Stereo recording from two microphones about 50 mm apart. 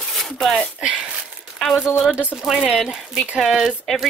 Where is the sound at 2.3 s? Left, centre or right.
Centre.